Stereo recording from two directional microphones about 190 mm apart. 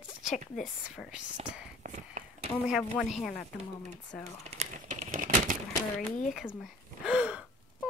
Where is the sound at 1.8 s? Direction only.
40° right (ahead or behind).